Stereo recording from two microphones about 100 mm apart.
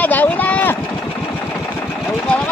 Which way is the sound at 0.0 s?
15° left (ahead or behind).